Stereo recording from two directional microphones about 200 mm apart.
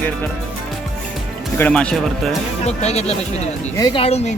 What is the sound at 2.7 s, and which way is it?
Speech, 35° left (ahead or behind).